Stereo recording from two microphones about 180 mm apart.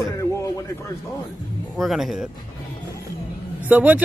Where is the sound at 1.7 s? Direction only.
Centre (ahead or behind).